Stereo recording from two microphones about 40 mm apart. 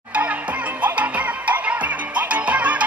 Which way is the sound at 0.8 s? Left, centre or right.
Right.